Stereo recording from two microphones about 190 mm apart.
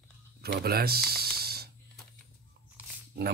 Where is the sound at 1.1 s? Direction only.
55° right (ahead or behind).